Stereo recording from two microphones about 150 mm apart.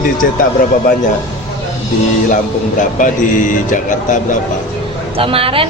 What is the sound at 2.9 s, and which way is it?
Speech, 60° left (ahead or behind).